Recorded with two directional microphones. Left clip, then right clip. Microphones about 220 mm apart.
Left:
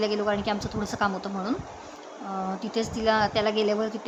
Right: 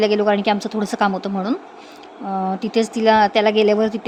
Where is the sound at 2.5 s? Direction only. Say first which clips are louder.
Right 9 dB; 30° right (ahead or behind).